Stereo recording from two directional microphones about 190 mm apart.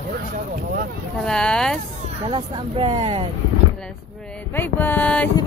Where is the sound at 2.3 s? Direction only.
25° right (ahead or behind).